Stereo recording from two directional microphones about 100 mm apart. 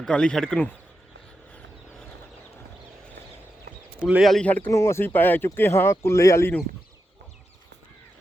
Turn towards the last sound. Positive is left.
turn(degrees=30)  # may be behind; listen again after turning